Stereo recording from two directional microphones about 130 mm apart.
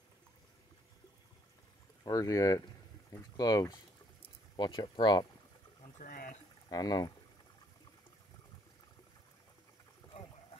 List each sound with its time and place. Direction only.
2.0 s speech: 25° left (ahead or behind)
5.9 s speech: 90° left
6.7 s speech: 30° left (ahead or behind)